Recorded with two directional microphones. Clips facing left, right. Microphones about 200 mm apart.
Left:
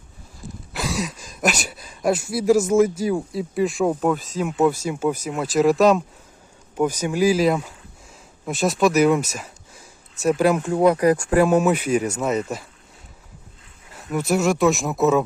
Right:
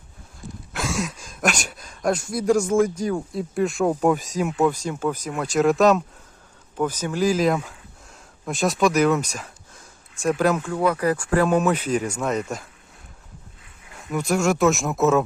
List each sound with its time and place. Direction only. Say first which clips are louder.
0.7 s speech: even; centre (ahead or behind)
4.0 s speech: right 1 dB; 10° right (ahead or behind)
4.4 s speech: left 2 dB; 5° left (ahead or behind)
6.7 s speech: left 3 dB; 10° left (ahead or behind)
10.6 s speech: left 5 dB; 20° left (ahead or behind); by 12.6 s centre (ahead or behind)
13.9 s speech: left 2 dB; 5° left (ahead or behind)